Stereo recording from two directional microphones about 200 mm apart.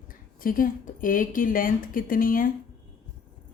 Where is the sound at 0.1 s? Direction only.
45° left (ahead or behind).